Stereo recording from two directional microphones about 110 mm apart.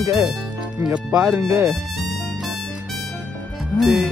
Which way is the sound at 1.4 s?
30° right (ahead or behind).